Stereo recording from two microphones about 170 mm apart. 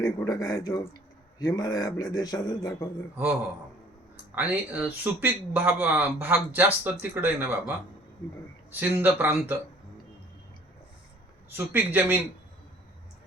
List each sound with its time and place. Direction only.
0.0 s speech: 20° left (ahead or behind)
4.4 s speech: 10° right (ahead or behind)
8.7 s speech: 10° right (ahead or behind)
11.5 s speech: 10° right (ahead or behind)